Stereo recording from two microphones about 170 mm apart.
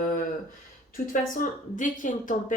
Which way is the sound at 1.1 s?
50° left (ahead or behind).